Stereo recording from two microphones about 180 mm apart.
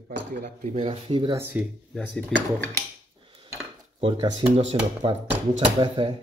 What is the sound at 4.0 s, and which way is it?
Speech, 30° right (ahead or behind).